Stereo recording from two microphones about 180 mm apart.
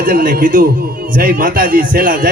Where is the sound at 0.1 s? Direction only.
50° right (ahead or behind).